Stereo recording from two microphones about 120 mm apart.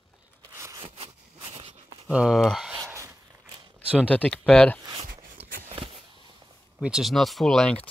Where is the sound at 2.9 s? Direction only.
25° right (ahead or behind).